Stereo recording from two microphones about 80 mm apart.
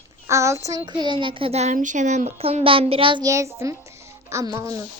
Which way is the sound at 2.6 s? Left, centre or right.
Right.